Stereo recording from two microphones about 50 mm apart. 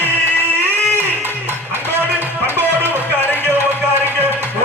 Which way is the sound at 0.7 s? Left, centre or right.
Left.